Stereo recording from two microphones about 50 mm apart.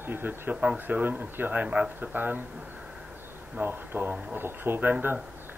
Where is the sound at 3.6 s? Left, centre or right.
Right.